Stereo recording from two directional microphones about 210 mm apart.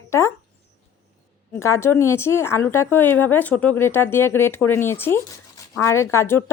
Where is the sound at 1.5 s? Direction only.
10° left (ahead or behind).